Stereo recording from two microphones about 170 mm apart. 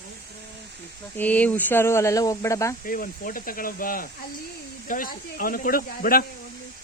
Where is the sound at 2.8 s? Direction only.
55° left (ahead or behind).